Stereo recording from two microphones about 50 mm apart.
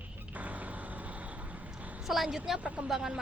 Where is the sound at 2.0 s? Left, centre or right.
Centre.